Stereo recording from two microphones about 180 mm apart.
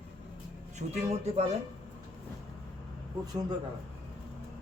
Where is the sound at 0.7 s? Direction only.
35° right (ahead or behind).